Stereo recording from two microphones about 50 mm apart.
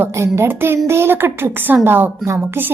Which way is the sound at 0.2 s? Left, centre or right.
Right.